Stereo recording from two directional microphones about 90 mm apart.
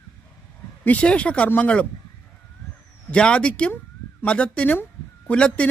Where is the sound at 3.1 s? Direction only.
10° left (ahead or behind).